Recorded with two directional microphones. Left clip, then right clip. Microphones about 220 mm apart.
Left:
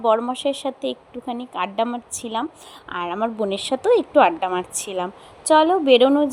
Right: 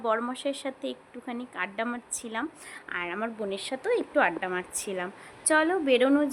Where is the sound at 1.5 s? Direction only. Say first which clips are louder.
Left 9 dB; 20° left (ahead or behind).